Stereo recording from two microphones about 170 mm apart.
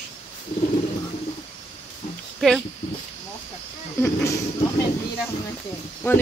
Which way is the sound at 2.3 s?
Centre (ahead or behind).